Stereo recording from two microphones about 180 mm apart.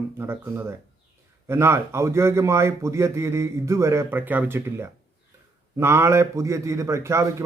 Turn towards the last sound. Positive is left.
turn(degrees=-15)  # may be behind; listen again after turning